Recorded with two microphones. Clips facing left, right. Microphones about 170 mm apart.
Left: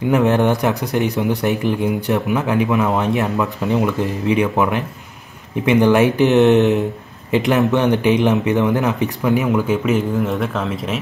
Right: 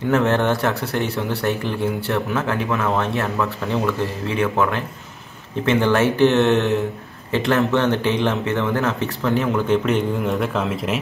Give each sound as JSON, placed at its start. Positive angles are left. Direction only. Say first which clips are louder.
{"t": 0.1, "sound": "speech", "louder": "left 3 dB", "side_deg": 15}